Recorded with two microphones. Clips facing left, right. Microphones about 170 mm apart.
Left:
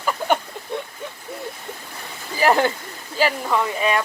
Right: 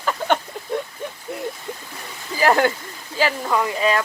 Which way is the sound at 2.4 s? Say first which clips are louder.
Even; 10° left (ahead or behind).